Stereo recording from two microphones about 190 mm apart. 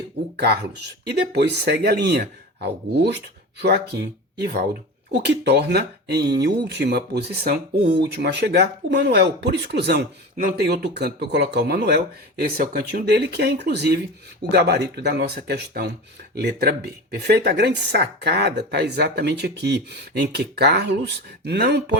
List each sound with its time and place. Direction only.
0.3 s speech: 55° right (ahead or behind)